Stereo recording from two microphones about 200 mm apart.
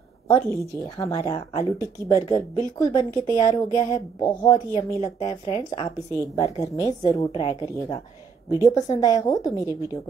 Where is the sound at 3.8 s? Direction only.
20° left (ahead or behind).